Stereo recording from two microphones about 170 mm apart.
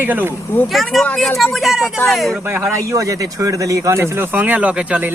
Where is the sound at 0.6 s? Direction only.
Centre (ahead or behind).